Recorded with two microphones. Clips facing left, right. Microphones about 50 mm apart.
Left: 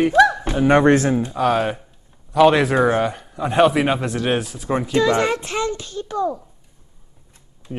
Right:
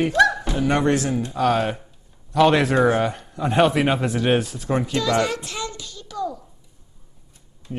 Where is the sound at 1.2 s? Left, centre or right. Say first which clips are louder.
Left 2 dB; centre.